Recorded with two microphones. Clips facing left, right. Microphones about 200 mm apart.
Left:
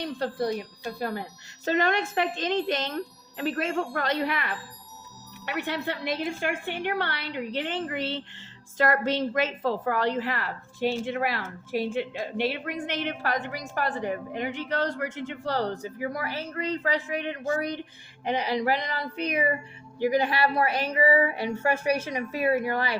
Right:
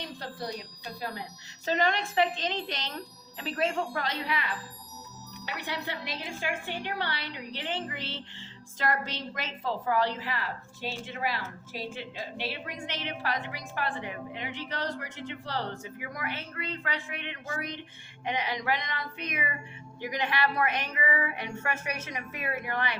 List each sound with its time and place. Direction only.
0.2 s a woman's voice: 55° left (ahead or behind); by 23.0 s 35° left (ahead or behind)